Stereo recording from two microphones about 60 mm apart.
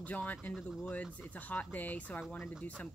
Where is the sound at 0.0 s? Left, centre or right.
Left.